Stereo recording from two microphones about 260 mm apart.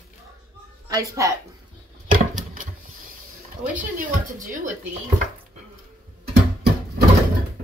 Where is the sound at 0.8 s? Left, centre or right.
Centre.